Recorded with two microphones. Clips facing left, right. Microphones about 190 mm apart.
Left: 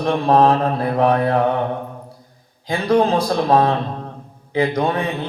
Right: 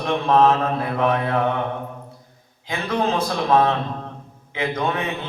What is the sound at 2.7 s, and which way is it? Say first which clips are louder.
Mantra: left 6 dB; 35° left (ahead or behind).